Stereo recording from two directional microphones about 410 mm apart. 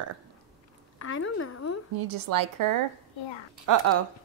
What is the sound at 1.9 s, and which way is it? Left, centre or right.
Speech, right.